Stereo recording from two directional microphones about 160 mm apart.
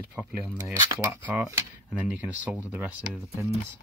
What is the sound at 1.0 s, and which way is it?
Speech, 15° right (ahead or behind).